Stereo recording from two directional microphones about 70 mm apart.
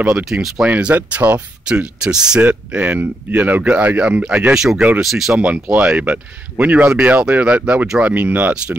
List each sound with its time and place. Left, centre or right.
0.1 s speech: centre
0.7 s speech: centre
4.6 s speech: centre
5.4 s speech: centre
8.1 s speech: right